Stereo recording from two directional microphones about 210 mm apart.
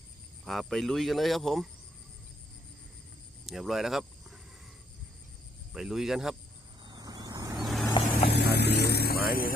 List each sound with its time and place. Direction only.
0.4 s cricket: centre (ahead or behind)
3.4 s speech: centre (ahead or behind)
5.7 s cricket: centre (ahead or behind)
6.8 s vehicle: 20° right (ahead or behind)
7.5 s vehicle: centre (ahead or behind)
8.2 s speech: 50° left (ahead or behind)